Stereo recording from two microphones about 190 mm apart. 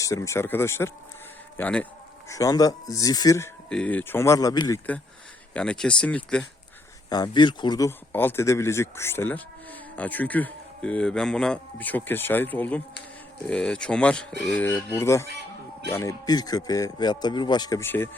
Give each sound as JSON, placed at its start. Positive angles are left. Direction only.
{"t": 0.0, "sound": "speech", "side_deg": 15}
{"t": 2.3, "sound": "speech", "side_deg": 20}
{"t": 3.7, "sound": "speech", "side_deg": 5}
{"t": 5.5, "sound": "speech", "side_deg": 5}
{"t": 7.1, "sound": "speech", "side_deg": 20}